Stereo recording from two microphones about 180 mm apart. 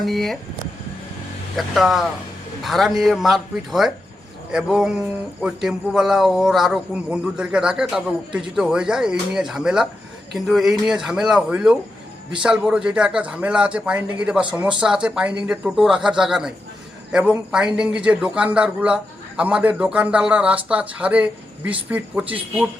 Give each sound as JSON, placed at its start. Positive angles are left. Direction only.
{"t": 0.0, "sound": "speech", "side_deg": 0}
{"t": 1.5, "sound": "a man's voice", "side_deg": 0}